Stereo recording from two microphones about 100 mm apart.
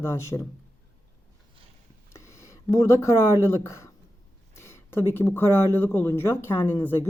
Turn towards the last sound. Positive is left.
turn(degrees=25)  # may be behind; listen again after turning